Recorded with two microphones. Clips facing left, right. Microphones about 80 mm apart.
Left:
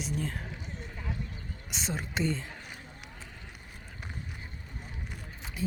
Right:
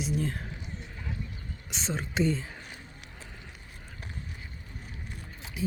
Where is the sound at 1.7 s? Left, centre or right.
Centre.